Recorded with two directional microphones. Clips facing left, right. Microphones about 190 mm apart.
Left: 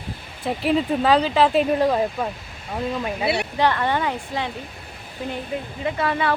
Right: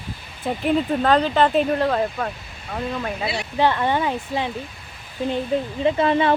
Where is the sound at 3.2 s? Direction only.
65° left (ahead or behind).